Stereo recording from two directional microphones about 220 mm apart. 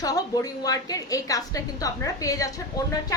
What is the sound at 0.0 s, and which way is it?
A woman's voice, 15° left (ahead or behind).